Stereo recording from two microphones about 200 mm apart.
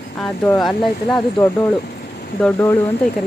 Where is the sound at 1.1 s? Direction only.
15° left (ahead or behind).